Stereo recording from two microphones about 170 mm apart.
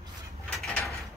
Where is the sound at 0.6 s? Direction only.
Centre (ahead or behind).